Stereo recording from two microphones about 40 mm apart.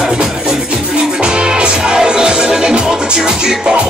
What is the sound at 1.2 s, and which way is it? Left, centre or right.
Music, right.